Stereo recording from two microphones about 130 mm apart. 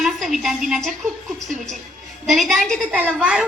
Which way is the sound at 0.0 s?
Centre (ahead or behind).